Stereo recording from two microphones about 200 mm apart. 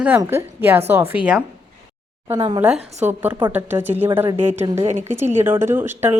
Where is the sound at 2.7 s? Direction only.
35° right (ahead or behind).